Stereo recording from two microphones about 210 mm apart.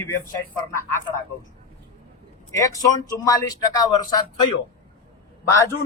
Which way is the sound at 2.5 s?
15° left (ahead or behind).